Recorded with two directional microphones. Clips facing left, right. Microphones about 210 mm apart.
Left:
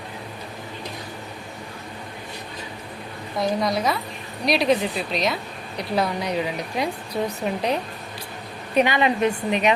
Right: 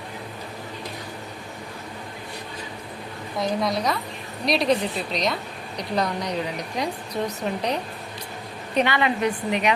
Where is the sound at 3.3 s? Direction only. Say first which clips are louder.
Left 2 dB; centre (ahead or behind).